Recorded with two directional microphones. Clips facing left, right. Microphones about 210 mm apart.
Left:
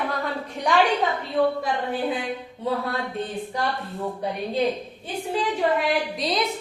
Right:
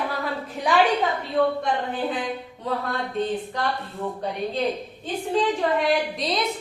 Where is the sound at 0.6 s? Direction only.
5° right (ahead or behind).